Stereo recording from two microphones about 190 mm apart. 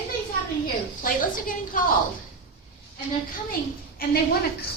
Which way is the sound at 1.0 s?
45° left (ahead or behind).